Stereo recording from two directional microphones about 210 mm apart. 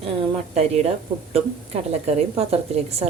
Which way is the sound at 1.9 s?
30° right (ahead or behind).